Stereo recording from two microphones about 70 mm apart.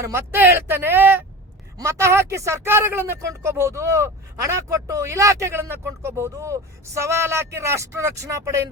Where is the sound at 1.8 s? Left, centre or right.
Right.